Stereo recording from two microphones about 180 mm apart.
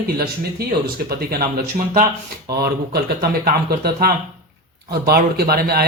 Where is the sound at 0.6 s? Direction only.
60° right (ahead or behind).